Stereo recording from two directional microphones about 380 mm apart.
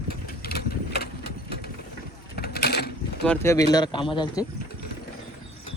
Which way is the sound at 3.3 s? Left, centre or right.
Centre.